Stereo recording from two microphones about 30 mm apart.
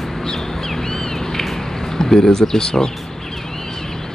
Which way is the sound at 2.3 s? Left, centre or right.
Centre.